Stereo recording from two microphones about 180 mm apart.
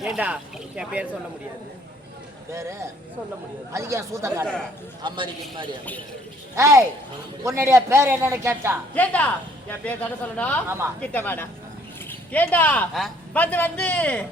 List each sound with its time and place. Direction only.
0.0 s speech: 5° right (ahead or behind)
2.5 s a woman's voice: 15° right (ahead or behind)
5.0 s a man's voice: 25° right (ahead or behind)
6.6 s a woman's voice: 15° right (ahead or behind)
9.0 s speech: 10° left (ahead or behind)